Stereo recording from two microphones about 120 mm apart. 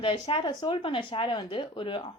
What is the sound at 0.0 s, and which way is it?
A woman's voice, 45° left (ahead or behind).